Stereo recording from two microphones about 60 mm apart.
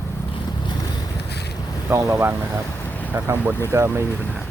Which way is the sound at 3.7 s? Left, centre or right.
Right.